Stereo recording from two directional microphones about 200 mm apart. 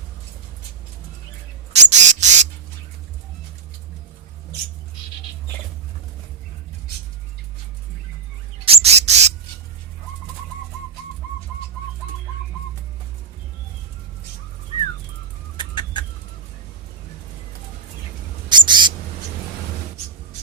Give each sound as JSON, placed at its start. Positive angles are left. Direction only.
{"t": 1.7, "sound": "a sound", "side_deg": -35}
{"t": 8.6, "sound": "bird", "side_deg": -30}
{"t": 15.5, "sound": "chicken", "side_deg": 20}
{"t": 18.4, "sound": "owl", "side_deg": -25}